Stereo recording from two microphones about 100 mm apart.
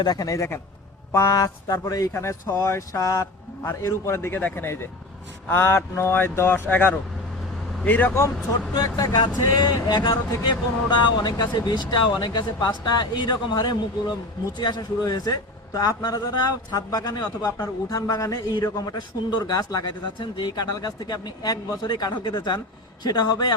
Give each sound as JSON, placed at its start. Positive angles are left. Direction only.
{"t": 0.0, "sound": "a man's voice", "side_deg": 40}
{"t": 8.7, "sound": "a man's voice", "side_deg": 45}
{"t": 20.1, "sound": "speech", "side_deg": 50}